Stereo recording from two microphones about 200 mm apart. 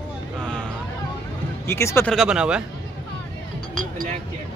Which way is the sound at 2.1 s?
5° right (ahead or behind).